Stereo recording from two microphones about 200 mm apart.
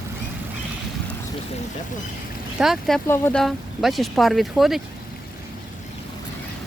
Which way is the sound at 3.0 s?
10° left (ahead or behind).